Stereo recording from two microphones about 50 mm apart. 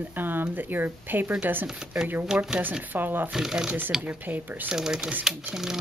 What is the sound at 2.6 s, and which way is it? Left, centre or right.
Speech, right.